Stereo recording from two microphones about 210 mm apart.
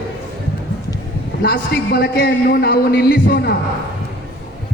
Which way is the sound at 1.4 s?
50° left (ahead or behind).